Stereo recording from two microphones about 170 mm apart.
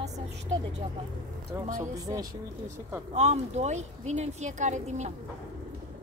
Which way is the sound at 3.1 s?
40° right (ahead or behind).